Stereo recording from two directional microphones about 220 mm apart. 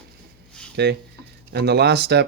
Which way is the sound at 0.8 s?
50° right (ahead or behind).